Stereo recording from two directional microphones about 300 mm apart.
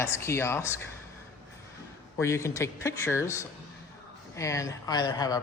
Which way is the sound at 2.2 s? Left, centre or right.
Centre.